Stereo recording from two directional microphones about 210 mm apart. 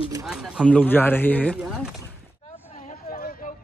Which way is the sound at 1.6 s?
5° right (ahead or behind).